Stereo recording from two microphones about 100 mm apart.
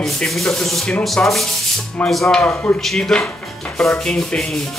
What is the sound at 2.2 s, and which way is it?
Speech, 15° left (ahead or behind).